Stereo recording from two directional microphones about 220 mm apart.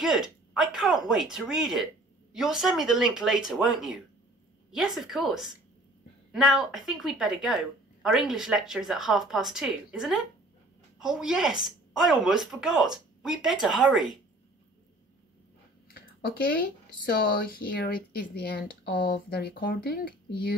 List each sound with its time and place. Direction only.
0.0 s a woman's voice: centre (ahead or behind)
15.9 s a sound: 45° left (ahead or behind)
17.0 s speech: 40° left (ahead or behind)